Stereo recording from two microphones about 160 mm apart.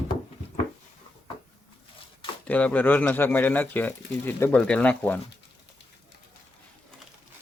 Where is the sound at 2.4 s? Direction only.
10° left (ahead or behind).